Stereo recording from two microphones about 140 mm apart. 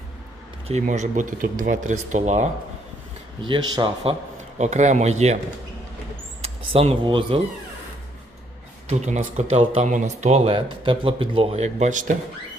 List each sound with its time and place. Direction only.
0.7 s speech: 60° right (ahead or behind)
3.4 s speech: 35° right (ahead or behind)
4.5 s speech: 55° right (ahead or behind)
6.4 s speech: 45° right (ahead or behind)
8.9 s speech: 55° right (ahead or behind)